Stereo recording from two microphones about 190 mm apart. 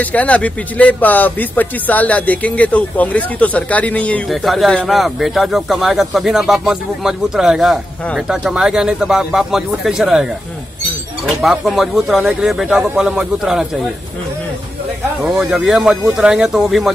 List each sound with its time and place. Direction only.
0.0 s speech: 10° left (ahead or behind)
11.2 s speech: centre (ahead or behind)
15.2 s speech: centre (ahead or behind)